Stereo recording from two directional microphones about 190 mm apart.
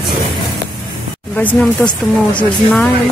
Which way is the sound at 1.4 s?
10° left (ahead or behind).